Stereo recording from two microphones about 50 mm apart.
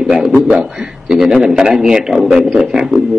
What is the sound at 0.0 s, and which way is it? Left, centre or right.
A man's voice, centre.